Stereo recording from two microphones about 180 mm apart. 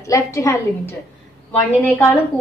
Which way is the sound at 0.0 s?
20° left (ahead or behind).